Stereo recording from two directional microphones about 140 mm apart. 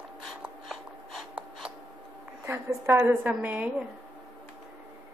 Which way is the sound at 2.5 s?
20° right (ahead or behind).